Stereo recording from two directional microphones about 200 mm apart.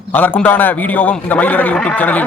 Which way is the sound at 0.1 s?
10° left (ahead or behind).